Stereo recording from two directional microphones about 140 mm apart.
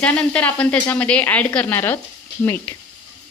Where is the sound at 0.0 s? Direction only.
10° left (ahead or behind).